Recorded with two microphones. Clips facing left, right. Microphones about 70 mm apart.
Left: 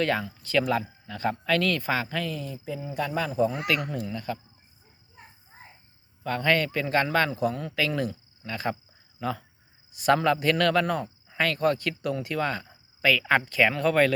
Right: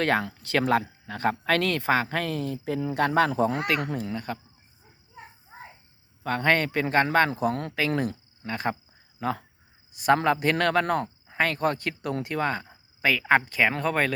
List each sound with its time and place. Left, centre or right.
0.0 s speech: right
0.3 s speech: right
0.6 s speech: right
3.9 s speech: right
6.2 s speech: right
11.3 s speech: right